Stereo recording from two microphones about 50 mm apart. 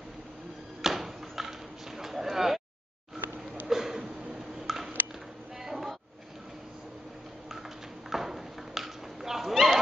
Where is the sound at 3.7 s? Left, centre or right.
Centre.